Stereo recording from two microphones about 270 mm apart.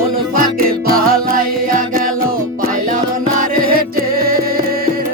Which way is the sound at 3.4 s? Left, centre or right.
Right.